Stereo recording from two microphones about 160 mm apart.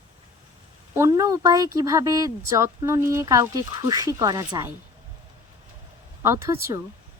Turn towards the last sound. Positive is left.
turn(degrees=-15)  # may be behind; listen again after turning